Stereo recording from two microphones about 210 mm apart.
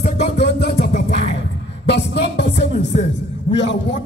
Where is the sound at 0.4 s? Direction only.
55° left (ahead or behind).